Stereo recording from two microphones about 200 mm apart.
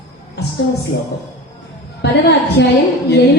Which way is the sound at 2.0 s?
60° left (ahead or behind).